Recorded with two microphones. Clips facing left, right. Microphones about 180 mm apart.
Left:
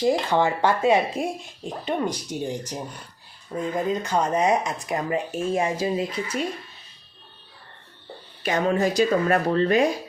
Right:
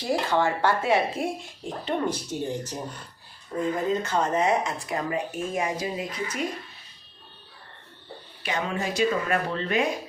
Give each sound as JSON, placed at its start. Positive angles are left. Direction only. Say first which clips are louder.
{"t": 0.0, "sound": "speech", "louder": "left 3 dB", "side_deg": 20}
{"t": 3.8, "sound": "speech", "louder": "left 1 dB", "side_deg": 15}
{"t": 8.4, "sound": "speech", "louder": "left 7 dB", "side_deg": 40}